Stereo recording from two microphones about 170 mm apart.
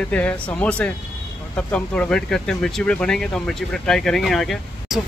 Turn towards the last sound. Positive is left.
turn(degrees=0)  # may be behind; listen again after turning